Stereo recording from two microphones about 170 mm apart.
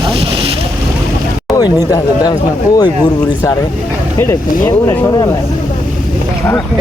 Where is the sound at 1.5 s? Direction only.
20° left (ahead or behind).